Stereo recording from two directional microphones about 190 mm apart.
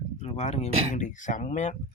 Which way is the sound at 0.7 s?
30° right (ahead or behind).